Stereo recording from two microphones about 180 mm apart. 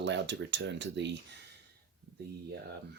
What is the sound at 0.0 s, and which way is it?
Speech, 80° right.